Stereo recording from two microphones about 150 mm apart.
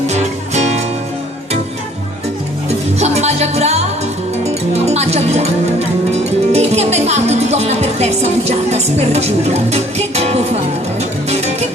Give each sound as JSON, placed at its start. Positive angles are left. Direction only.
{"t": 0.1, "sound": "music", "side_deg": -50}
{"t": 2.6, "sound": "music", "side_deg": -45}
{"t": 6.1, "sound": "speech", "side_deg": -45}
{"t": 11.3, "sound": "music", "side_deg": -45}